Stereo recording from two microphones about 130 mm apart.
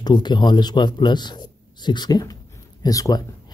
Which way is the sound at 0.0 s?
35° left (ahead or behind).